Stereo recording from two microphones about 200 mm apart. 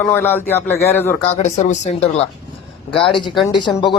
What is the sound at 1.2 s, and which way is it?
Speech, 35° left (ahead or behind).